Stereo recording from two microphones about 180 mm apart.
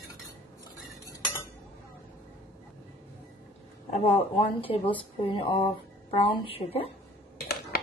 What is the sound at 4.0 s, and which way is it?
A woman's voice, 35° left (ahead or behind).